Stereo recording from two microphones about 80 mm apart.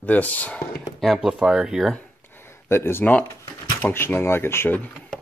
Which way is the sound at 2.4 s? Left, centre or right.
Left.